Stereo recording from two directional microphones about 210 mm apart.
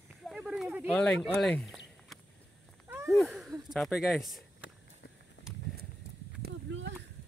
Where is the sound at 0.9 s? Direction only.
5° left (ahead or behind).